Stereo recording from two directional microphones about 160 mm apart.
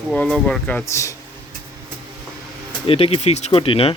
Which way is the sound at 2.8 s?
35° left (ahead or behind).